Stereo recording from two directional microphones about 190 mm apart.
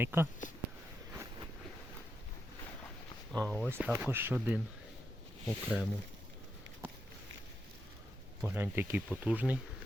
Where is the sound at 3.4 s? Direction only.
10° left (ahead or behind).